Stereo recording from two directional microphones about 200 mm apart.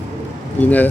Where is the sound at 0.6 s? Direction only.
10° left (ahead or behind).